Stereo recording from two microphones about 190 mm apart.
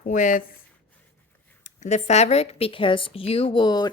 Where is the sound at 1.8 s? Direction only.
35° left (ahead or behind).